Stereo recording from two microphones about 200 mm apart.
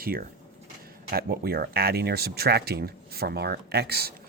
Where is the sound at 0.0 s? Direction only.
50° right (ahead or behind).